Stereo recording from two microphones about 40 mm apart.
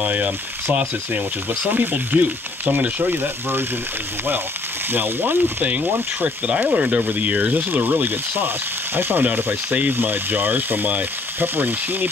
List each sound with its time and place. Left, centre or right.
0.0 s speech: right
1.6 s speech: right
4.9 s speech: right
6.2 s speech: right
7.5 s speech: right